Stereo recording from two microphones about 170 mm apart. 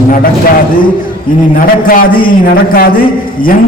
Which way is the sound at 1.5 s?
55° left (ahead or behind).